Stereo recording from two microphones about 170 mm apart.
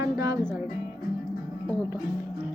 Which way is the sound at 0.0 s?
20° right (ahead or behind).